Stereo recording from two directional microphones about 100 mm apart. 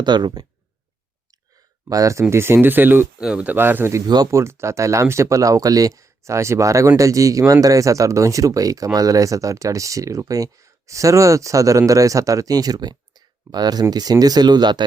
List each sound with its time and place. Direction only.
0.0 s speech: 50° right (ahead or behind)
1.9 s speech: 35° right (ahead or behind)
4.0 s speech: 40° right (ahead or behind)
4.3 s speech: 25° right (ahead or behind); by 14.8 s 45° right (ahead or behind)